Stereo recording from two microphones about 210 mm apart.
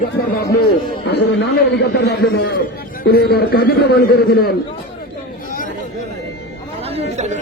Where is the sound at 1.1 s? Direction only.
55° left (ahead or behind).